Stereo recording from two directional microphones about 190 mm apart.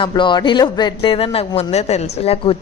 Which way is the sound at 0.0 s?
25° left (ahead or behind).